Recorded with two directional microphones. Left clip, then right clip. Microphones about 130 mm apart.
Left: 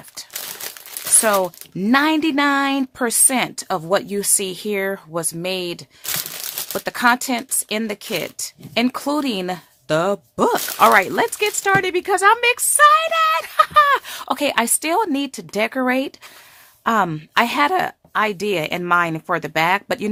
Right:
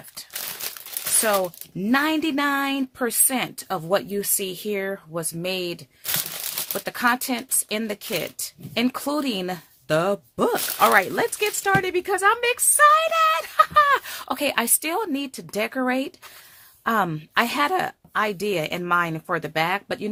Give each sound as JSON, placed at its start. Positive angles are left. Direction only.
{"t": 1.2, "sound": "a woman's voice", "side_deg": 30}